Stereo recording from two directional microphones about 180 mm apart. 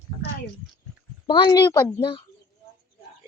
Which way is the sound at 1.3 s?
25° left (ahead or behind).